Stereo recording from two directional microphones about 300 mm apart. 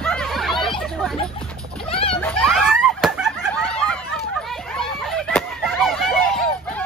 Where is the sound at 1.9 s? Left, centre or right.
Centre.